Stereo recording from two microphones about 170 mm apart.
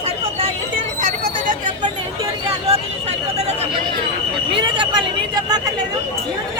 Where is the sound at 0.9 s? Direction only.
50° right (ahead or behind).